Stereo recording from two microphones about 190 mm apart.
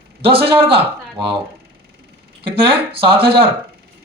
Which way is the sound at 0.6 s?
25° right (ahead or behind).